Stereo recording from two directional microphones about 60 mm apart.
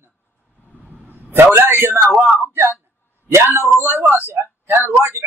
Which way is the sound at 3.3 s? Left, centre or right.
Right.